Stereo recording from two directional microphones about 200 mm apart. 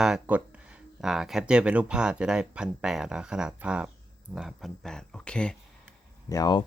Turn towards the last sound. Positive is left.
turn(degrees=20)  # may be behind; listen again after turning